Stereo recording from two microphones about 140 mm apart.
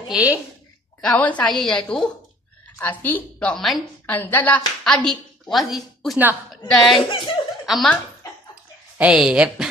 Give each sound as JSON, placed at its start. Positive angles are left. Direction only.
{"t": 0.1, "sound": "a woman's voice", "side_deg": -10}
{"t": 1.0, "sound": "a woman's voice", "side_deg": 10}
{"t": 4.0, "sound": "a woman's voice", "side_deg": 15}
{"t": 7.1, "sound": "speech", "side_deg": 35}
{"t": 7.6, "sound": "a woman's voice", "side_deg": 0}